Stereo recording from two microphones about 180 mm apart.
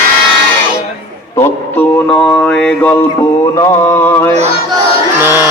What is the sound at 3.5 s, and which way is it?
Mantra, 20° left (ahead or behind).